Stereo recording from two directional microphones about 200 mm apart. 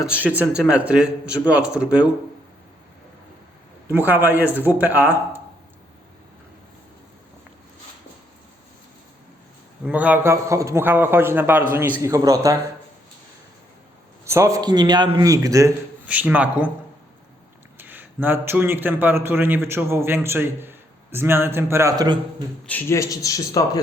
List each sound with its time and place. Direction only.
0.2 s speech: 5° right (ahead or behind)
3.8 s a man's voice: 10° right (ahead or behind)
9.8 s a man's voice: 10° right (ahead or behind)
14.3 s a man's voice: 15° right (ahead or behind)
17.7 s a man's voice: 10° right (ahead or behind)
22.6 s a man's voice: 10° left (ahead or behind)